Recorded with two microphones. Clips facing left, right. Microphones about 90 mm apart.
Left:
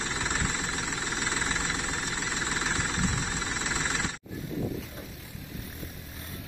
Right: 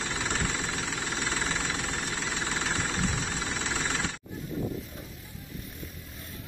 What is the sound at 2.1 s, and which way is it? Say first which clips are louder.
Vehicle: even; 10° left (ahead or behind).